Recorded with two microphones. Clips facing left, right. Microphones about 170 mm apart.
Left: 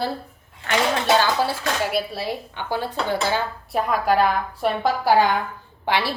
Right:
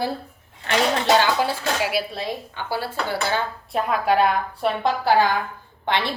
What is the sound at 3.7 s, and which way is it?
A woman's voice, centre (ahead or behind).